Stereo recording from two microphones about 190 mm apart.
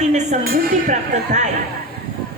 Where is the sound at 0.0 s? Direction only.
40° right (ahead or behind).